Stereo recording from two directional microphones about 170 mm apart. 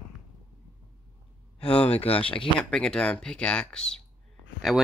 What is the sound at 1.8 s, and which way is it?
Speech, 35° left (ahead or behind).